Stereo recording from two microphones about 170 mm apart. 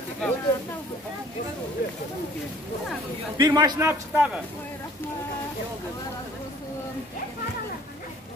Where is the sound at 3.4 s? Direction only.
25° right (ahead or behind).